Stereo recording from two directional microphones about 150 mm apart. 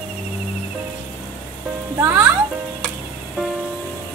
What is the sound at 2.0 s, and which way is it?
Speech, 15° right (ahead or behind).